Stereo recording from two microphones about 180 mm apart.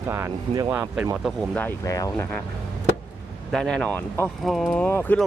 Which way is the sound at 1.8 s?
20° left (ahead or behind).